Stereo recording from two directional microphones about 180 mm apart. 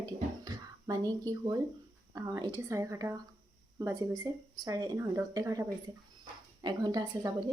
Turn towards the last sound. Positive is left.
turn(degrees=-20)  # may be behind; listen again after turning